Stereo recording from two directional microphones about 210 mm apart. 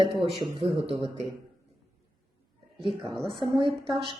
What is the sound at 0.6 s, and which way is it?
Speech, 25° right (ahead or behind).